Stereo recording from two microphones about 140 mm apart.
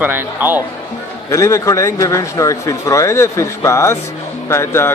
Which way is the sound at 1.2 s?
20° left (ahead or behind).